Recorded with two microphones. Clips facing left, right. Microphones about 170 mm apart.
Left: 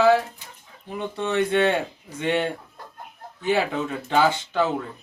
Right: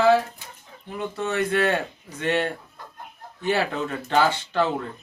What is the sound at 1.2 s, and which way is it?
Speech, 20° left (ahead or behind).